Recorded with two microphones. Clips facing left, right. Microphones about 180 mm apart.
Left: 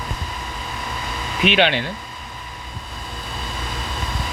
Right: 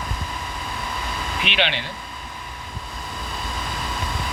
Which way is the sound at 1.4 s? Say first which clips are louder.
Left 8 dB; 45° left (ahead or behind).